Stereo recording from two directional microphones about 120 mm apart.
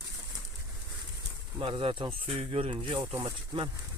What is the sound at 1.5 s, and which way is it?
Speech, 45° right (ahead or behind).